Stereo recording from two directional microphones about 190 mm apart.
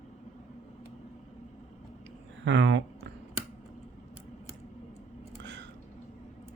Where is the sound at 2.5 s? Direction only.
70° right (ahead or behind).